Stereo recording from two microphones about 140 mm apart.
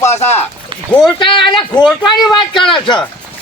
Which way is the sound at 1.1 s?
35° left (ahead or behind).